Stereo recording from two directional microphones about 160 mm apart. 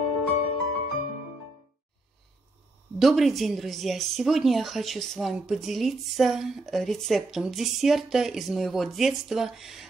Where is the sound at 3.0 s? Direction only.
Centre (ahead or behind).